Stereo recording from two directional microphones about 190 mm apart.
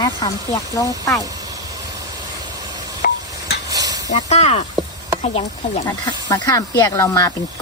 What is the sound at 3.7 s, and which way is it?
Stir, 20° right (ahead or behind).